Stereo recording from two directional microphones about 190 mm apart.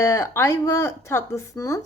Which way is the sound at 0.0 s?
15° left (ahead or behind).